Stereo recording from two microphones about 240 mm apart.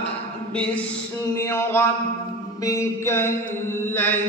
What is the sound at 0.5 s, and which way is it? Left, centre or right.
Mantra, centre.